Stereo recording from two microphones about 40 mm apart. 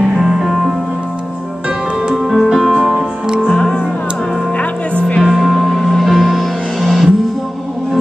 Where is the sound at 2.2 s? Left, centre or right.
Centre.